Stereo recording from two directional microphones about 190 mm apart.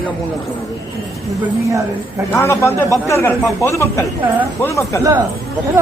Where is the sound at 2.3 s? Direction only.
15° left (ahead or behind).